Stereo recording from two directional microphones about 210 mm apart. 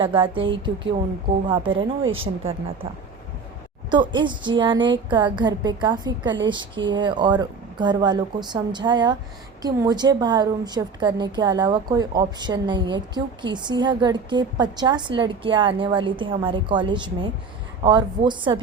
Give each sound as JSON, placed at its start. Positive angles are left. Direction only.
{"t": 0.0, "sound": "a woman's voice", "side_deg": -25}
{"t": 1.6, "sound": "speech", "side_deg": -65}
{"t": 2.1, "sound": "a woman's voice", "side_deg": -25}
{"t": 3.9, "sound": "a woman's voice", "side_deg": -20}